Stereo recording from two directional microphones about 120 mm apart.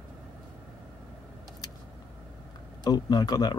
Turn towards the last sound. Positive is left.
turn(degrees=30)  # may be behind; listen again after turning